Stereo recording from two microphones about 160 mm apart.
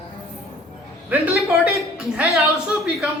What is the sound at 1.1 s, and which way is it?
A woman's voice, 5° right (ahead or behind).